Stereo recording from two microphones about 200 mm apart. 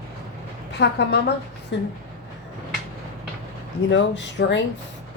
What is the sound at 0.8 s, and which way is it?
Speech, 60° left (ahead or behind).